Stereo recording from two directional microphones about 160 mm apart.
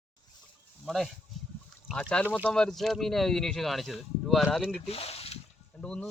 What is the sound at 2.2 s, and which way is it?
Speech, 10° right (ahead or behind).